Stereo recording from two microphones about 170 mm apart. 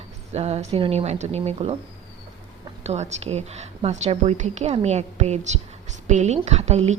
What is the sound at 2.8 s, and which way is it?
A woman's voice, 40° right (ahead or behind).